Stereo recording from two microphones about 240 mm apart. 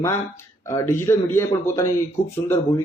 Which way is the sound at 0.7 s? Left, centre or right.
Centre.